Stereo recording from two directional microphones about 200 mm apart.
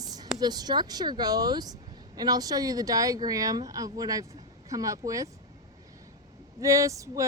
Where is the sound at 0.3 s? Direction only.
20° right (ahead or behind).